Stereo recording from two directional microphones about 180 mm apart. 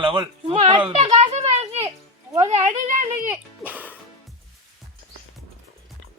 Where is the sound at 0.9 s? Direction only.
35° right (ahead or behind).